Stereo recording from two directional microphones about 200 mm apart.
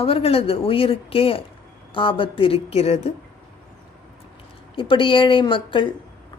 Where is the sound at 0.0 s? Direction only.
30° left (ahead or behind).